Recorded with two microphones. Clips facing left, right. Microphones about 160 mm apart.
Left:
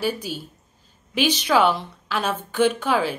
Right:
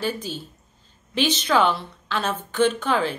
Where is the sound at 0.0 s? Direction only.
10° left (ahead or behind).